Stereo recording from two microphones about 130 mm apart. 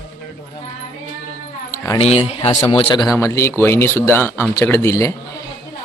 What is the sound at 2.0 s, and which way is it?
A man's voice, 50° left (ahead or behind).